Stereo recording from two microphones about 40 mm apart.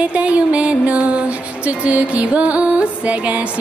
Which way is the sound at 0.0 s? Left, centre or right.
Right.